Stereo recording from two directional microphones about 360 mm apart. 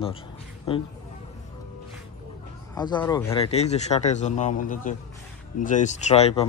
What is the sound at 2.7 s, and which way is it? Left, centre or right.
A man's voice, centre.